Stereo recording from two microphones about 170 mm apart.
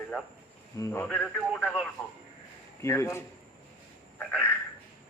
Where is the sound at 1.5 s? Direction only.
5° right (ahead or behind).